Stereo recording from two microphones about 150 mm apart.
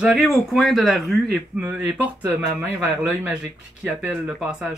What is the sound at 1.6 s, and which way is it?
Speech, 10° right (ahead or behind).